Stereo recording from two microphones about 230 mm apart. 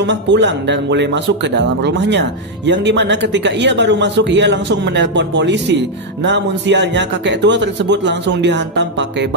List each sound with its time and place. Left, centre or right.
0.0 s speech: right